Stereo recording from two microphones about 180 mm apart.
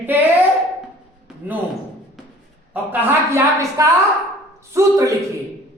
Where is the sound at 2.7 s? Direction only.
10° right (ahead or behind).